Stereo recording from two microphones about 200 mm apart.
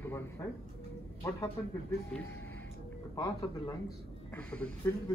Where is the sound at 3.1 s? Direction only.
20° left (ahead or behind).